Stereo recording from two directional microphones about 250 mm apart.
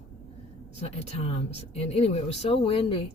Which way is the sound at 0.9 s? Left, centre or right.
Left.